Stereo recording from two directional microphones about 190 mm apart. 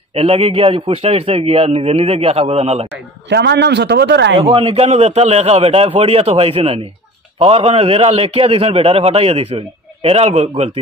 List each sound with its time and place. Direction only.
0.1 s a man's voice: 30° right (ahead or behind)
2.9 s speech: 65° right (ahead or behind)
4.4 s a man's voice: 30° right (ahead or behind)